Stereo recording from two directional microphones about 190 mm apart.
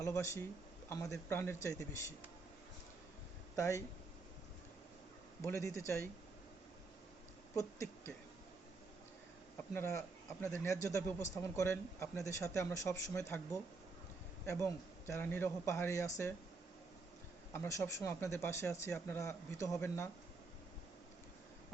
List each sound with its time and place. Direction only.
0.0 s speech: 15° left (ahead or behind)
3.5 s speech: 15° left (ahead or behind)
5.4 s speech: 15° left (ahead or behind)
7.5 s speech: 15° left (ahead or behind)
9.7 s speech: 15° left (ahead or behind)
17.5 s speech: 15° left (ahead or behind)